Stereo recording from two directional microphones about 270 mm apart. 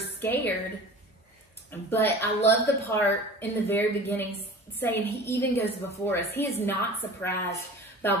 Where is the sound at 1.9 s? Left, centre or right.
Centre.